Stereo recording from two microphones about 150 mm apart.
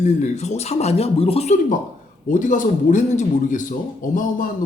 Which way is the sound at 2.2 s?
60° left (ahead or behind).